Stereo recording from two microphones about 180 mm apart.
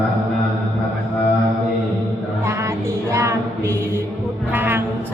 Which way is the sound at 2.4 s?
15° right (ahead or behind).